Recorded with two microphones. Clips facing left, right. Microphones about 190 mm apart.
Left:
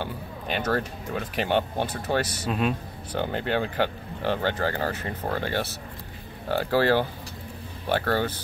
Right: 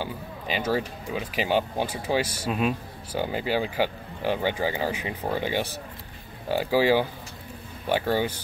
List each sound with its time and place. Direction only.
0.0 s speech: 10° right (ahead or behind)